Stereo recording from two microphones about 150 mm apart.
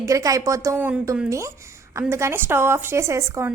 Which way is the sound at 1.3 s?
20° right (ahead or behind).